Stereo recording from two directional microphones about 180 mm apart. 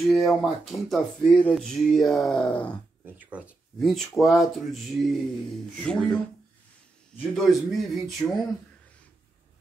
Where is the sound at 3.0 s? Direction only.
10° right (ahead or behind).